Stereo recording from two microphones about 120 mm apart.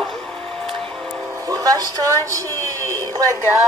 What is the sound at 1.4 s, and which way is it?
A woman's voice, 30° right (ahead or behind).